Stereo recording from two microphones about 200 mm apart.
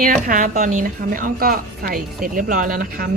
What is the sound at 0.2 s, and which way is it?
A woman's voice, 40° right (ahead or behind).